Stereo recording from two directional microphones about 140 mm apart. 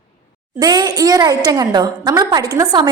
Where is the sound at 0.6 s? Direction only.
30° right (ahead or behind).